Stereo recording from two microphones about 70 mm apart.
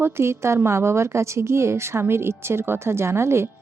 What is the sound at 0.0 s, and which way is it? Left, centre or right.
A woman's voice, right.